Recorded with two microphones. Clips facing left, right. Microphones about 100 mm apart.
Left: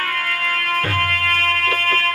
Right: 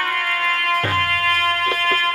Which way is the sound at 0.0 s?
25° right (ahead or behind).